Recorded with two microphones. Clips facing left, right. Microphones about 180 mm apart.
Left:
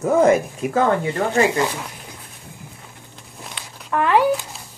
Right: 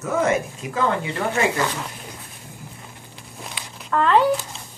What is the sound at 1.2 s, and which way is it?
Speech, 45° left (ahead or behind).